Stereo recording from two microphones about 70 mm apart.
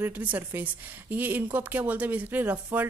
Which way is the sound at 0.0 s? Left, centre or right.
Right.